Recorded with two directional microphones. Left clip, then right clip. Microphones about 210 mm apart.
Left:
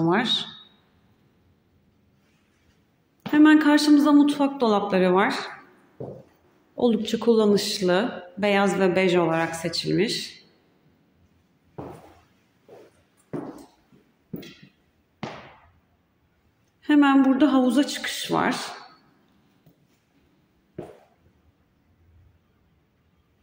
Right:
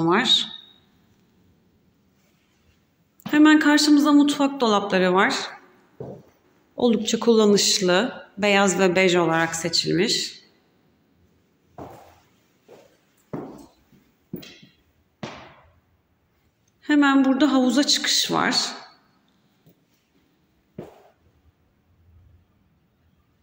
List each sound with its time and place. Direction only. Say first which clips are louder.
0.0 s speech: right 4 dB; 5° left (ahead or behind)
3.2 s speech: right 1 dB; 5° left (ahead or behind)
6.8 s speech: right 2 dB; centre (ahead or behind)
16.8 s a woman's voice: even; 10° left (ahead or behind)